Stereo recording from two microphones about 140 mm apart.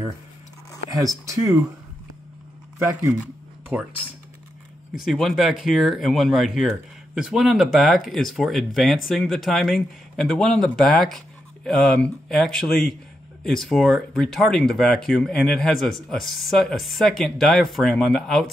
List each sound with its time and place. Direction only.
0.9 s speech: 25° right (ahead or behind)
2.8 s speech: 20° right (ahead or behind)
4.9 s speech: centre (ahead or behind)